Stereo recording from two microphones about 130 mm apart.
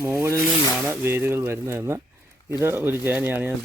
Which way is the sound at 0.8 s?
20° right (ahead or behind).